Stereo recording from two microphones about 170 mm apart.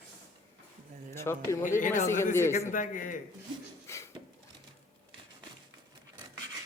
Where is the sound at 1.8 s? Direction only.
50° left (ahead or behind).